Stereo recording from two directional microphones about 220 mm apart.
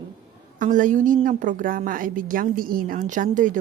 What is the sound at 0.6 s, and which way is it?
A woman's voice, 35° right (ahead or behind).